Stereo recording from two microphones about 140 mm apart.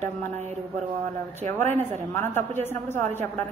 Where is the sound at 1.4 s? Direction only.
55° right (ahead or behind).